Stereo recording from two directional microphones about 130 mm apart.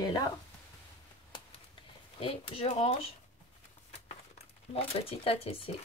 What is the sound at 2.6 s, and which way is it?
Speech, 55° left (ahead or behind).